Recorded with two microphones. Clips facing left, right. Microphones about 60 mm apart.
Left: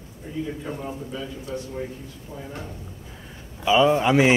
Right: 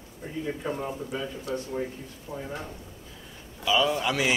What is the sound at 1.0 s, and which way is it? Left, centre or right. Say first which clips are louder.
Speech: even; right.